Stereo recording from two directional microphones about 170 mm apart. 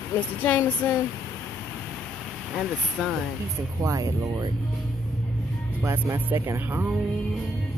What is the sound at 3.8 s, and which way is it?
Speech, 20° right (ahead or behind).